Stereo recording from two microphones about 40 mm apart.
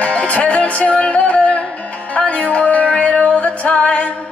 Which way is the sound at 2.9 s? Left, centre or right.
Centre.